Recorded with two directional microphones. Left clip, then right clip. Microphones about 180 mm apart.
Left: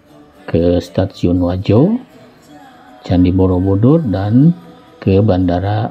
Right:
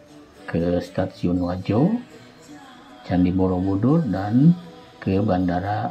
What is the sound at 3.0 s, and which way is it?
Speech, 55° left (ahead or behind).